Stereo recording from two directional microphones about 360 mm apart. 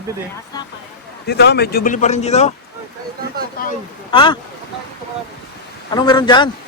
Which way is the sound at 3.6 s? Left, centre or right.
Left.